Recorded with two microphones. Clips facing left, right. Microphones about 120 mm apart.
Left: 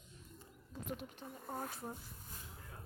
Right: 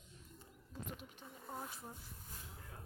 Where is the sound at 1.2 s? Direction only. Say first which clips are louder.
Left 4 dB; 45° left (ahead or behind).